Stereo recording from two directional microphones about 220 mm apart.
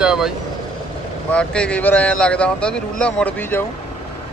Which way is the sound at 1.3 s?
5° left (ahead or behind).